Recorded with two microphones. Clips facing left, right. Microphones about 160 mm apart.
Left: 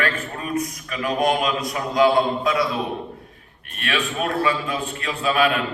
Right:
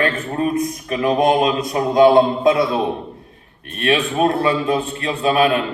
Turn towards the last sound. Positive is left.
turn(degrees=-35)  # may be behind; listen again after turning